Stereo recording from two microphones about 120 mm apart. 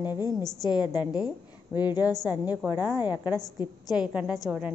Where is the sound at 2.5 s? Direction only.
15° right (ahead or behind).